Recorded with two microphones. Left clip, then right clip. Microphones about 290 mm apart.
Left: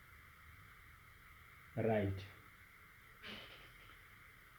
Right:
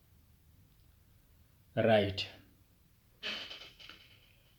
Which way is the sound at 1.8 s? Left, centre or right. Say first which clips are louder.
Right 10 dB; right.